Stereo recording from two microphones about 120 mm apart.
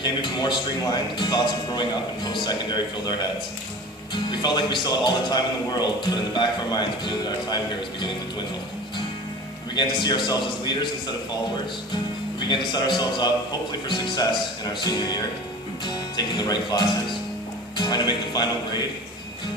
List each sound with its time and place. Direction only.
0.0 s a man's voice: 40° left (ahead or behind)
9.7 s a man's voice: 35° left (ahead or behind)
12.4 s a man's voice: 40° left (ahead or behind)